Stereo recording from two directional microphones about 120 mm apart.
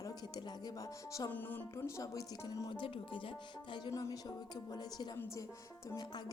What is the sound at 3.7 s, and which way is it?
Speech, 30° left (ahead or behind).